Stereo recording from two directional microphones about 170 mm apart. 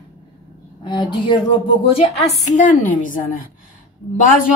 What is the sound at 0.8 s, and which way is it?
A woman's voice, 25° left (ahead or behind).